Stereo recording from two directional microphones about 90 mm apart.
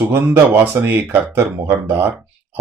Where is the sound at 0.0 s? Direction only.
25° right (ahead or behind).